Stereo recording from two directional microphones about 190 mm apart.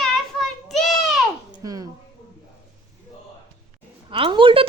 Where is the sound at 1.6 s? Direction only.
20° right (ahead or behind).